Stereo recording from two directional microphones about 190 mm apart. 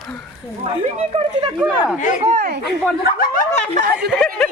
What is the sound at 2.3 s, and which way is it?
Speech, 50° right (ahead or behind).